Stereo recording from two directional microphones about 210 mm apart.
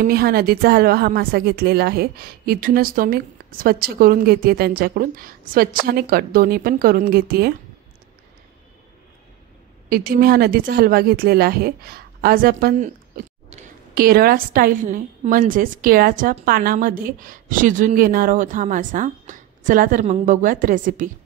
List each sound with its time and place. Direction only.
0.0 s speech: 45° right (ahead or behind)
9.8 s speech: 45° right (ahead or behind)